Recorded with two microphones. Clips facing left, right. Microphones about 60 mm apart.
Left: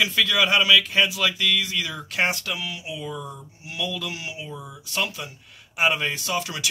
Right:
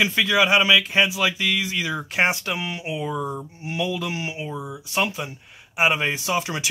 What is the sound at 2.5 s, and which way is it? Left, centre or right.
Speech, right.